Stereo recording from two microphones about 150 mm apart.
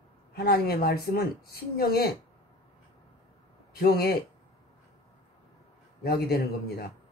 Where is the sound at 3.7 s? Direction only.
90° left.